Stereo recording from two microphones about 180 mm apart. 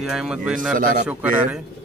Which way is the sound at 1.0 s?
5° right (ahead or behind).